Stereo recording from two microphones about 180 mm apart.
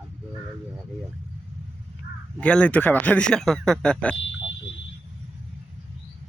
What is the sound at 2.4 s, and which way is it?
Speech, 5° left (ahead or behind).